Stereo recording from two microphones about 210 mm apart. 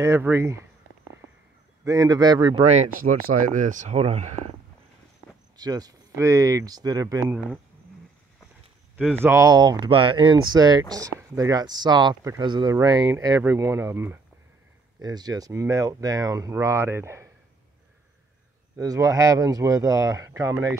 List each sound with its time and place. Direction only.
0.0 s speech: 10° right (ahead or behind)
1.9 s speech: 20° right (ahead or behind)
5.6 s speech: 20° right (ahead or behind)
8.9 s speech: 10° right (ahead or behind)
18.8 s speech: 15° right (ahead or behind)